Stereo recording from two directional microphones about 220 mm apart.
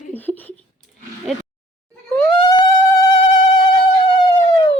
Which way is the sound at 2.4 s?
20° left (ahead or behind).